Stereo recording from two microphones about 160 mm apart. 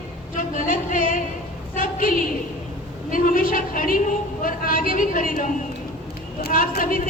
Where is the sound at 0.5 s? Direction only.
55° left (ahead or behind).